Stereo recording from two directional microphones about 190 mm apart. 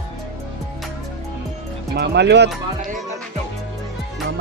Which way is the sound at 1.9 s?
60° right (ahead or behind).